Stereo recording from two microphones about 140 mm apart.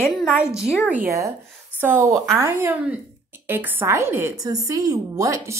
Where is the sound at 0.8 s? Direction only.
10° right (ahead or behind).